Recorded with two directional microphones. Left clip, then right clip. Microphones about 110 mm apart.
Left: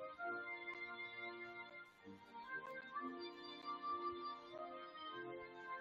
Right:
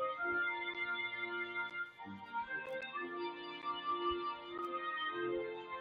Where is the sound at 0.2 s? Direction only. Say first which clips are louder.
Right 10 dB; 35° right (ahead or behind).